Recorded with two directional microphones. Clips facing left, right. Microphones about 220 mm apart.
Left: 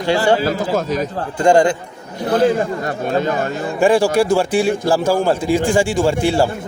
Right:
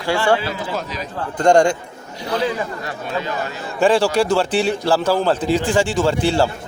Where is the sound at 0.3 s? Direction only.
45° left (ahead or behind).